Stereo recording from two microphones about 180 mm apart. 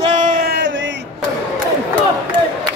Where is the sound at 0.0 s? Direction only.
40° right (ahead or behind); by 0.9 s 85° right.